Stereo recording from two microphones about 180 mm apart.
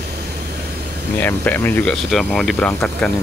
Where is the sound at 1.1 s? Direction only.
10° left (ahead or behind).